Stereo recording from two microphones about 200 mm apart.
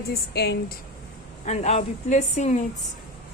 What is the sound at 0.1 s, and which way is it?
Speech, 55° left (ahead or behind).